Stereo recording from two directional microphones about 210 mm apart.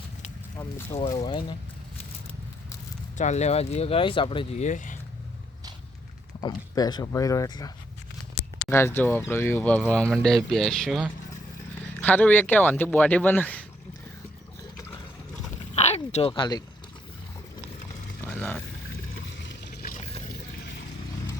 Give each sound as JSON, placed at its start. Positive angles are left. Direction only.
{"t": 0.9, "sound": "speech", "side_deg": 20}
{"t": 3.2, "sound": "speech", "side_deg": 35}
{"t": 6.4, "sound": "speech", "side_deg": 20}
{"t": 8.7, "sound": "speech", "side_deg": 10}
{"t": 15.7, "sound": "a sound", "side_deg": 30}
{"t": 18.3, "sound": "vehicle", "side_deg": 5}
{"t": 19.2, "sound": "a sound", "side_deg": 60}